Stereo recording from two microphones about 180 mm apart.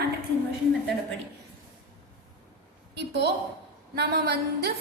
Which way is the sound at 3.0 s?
75° right (ahead or behind).